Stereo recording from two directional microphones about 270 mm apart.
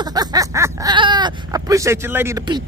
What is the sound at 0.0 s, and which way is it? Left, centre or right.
Speech, centre.